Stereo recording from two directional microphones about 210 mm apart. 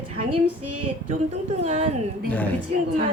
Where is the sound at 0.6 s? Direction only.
90° right.